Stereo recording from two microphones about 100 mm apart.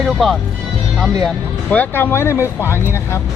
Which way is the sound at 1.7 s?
15° left (ahead or behind).